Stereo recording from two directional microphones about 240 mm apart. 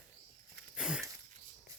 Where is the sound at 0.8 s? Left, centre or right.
Centre.